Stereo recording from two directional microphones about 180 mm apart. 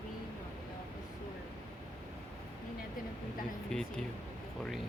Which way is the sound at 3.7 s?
5° left (ahead or behind).